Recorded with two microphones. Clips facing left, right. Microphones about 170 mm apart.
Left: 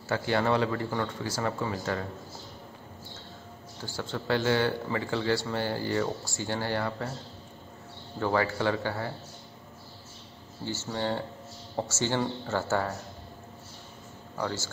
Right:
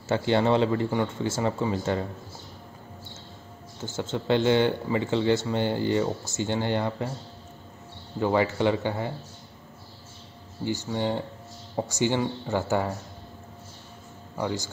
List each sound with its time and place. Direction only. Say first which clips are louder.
0.1 s speech: right 4 dB; 25° right (ahead or behind)
3.8 s speech: right 4 dB; 20° right (ahead or behind)
8.2 s speech: right 4 dB; 20° right (ahead or behind)
10.6 s speech: right 4 dB; 15° right (ahead or behind)
14.3 s speech: right 3 dB; 15° right (ahead or behind)